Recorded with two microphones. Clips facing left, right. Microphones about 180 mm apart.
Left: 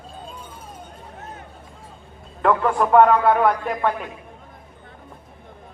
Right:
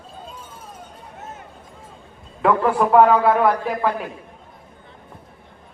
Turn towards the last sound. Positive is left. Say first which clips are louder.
# right 1 dB
turn(degrees=0)  # may be behind; listen again after turning